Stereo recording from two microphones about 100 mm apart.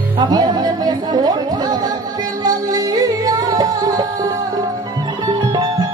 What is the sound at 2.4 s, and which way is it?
Music, 40° right (ahead or behind).